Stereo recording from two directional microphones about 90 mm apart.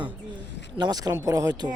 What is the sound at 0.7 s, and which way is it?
Speech, 50° right (ahead or behind).